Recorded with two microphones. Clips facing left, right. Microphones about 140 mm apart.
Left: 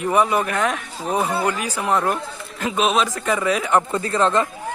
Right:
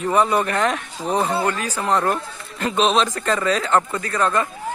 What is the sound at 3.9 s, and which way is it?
Speech, 25° left (ahead or behind).